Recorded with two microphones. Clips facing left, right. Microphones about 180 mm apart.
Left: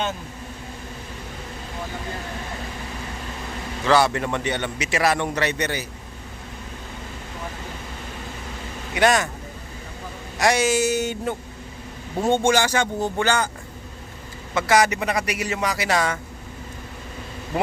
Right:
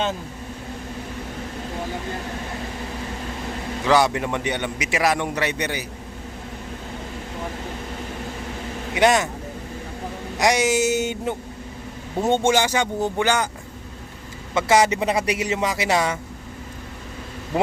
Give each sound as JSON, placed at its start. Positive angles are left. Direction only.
{"t": 3.8, "sound": "a man's voice", "side_deg": -15}
{"t": 9.0, "sound": "a man's voice", "side_deg": -20}
{"t": 10.3, "sound": "a man's voice", "side_deg": -20}
{"t": 14.5, "sound": "a man's voice", "side_deg": -25}